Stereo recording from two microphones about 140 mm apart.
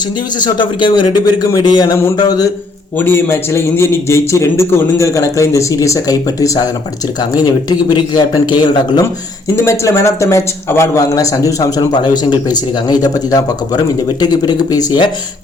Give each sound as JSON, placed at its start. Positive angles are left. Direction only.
{"t": 0.3, "sound": "a man's voice", "side_deg": 30}
{"t": 3.0, "sound": "a man's voice", "side_deg": 15}
{"t": 9.6, "sound": "a man's voice", "side_deg": 20}